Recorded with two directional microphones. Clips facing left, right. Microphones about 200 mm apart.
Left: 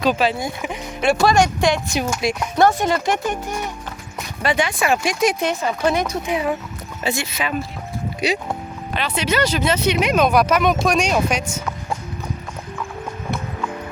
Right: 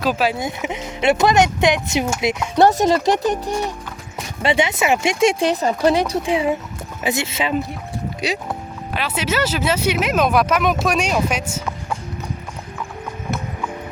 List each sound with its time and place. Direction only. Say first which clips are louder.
0.0 s speech: left 1 dB; 5° right (ahead or behind)
0.3 s speech: right 1 dB; 20° right (ahead or behind)
2.6 s speech: right 3 dB; 35° right (ahead or behind)
8.2 s speech: left 3 dB; centre (ahead or behind)